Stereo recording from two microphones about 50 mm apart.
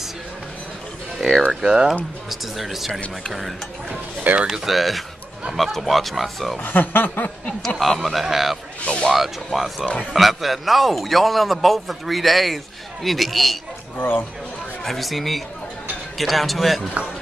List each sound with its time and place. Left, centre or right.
1.5 s speech: centre
2.2 s a man's voice: centre
2.9 s speech: left
3.9 s speech: right
4.5 s a man's voice: centre
6.6 s speech: left
7.8 s a man's voice: centre
8.8 s a sound: centre
9.1 s a man's voice: centre
13.9 s speech: left
14.9 s a man's voice: centre